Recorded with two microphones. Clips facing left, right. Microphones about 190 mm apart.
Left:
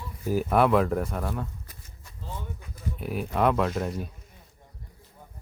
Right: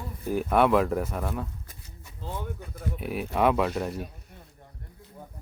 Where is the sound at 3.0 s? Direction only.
Centre (ahead or behind).